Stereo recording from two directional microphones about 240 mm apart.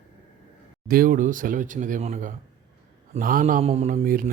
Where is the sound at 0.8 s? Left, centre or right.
Right.